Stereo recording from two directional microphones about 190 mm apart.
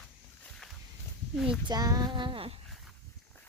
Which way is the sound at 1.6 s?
20° right (ahead or behind).